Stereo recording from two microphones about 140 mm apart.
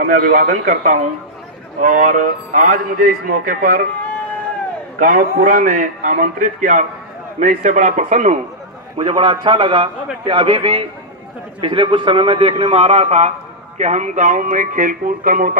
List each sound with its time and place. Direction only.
0.0 s a man's voice: 80° right
4.9 s a man's voice: 80° right; by 8.4 s 55° right (ahead or behind)
8.9 s a man's voice: 35° right (ahead or behind); by 15.5 s 75° right (ahead or behind)